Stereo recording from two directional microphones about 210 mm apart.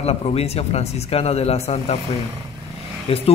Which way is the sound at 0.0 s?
30° left (ahead or behind).